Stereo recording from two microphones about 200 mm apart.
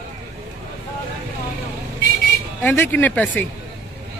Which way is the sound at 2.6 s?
10° left (ahead or behind).